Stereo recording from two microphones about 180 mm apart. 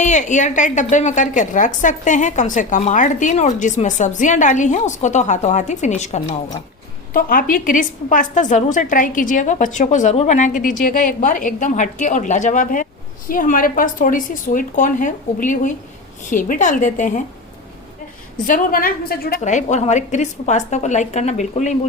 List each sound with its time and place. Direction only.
0.0 s a woman's voice: 40° left (ahead or behind)
7.1 s a woman's voice: 55° left (ahead or behind)
18.4 s a woman's voice: 50° left (ahead or behind)
19.4 s a woman's voice: 40° left (ahead or behind)